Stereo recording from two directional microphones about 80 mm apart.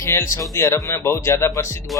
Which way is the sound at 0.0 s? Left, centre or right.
Left.